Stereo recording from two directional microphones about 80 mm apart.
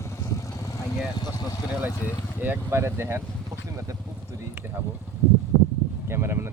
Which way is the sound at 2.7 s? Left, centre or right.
Right.